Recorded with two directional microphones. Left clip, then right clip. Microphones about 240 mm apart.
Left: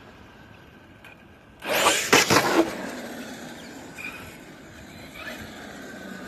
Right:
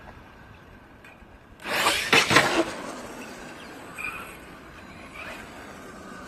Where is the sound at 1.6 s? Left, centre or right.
Centre; by 4.4 s left.